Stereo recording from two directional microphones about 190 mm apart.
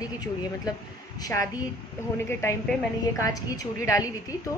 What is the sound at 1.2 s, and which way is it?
Speech, 15° left (ahead or behind).